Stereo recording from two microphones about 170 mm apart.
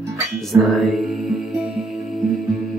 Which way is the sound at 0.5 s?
Centre (ahead or behind).